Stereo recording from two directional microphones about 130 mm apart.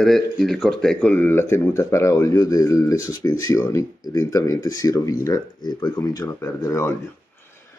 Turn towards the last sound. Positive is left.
turn(degrees=20)  # may be behind; listen again after turning